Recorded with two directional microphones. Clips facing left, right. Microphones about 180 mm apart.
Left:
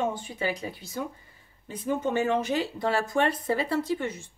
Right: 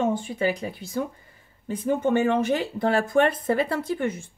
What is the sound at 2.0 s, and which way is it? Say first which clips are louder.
Speech: right 5 dB; 55° right (ahead or behind).